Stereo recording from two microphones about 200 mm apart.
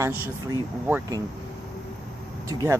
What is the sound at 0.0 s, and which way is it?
Speech, 10° right (ahead or behind).